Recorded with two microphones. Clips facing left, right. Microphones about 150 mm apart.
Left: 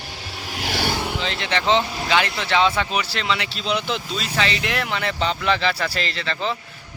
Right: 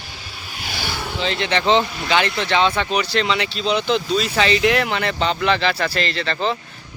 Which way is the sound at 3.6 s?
35° right (ahead or behind).